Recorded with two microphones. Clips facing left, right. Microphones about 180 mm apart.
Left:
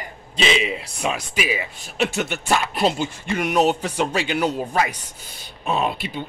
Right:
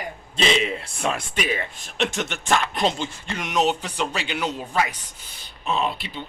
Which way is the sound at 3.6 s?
45° left (ahead or behind).